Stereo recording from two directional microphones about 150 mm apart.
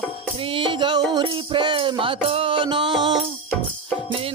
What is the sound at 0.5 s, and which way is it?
Music, 35° right (ahead or behind).